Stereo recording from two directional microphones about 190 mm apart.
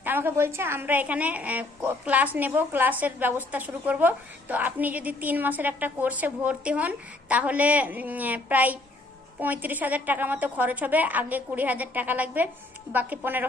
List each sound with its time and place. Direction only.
0.0 s a woman's voice: 10° right (ahead or behind)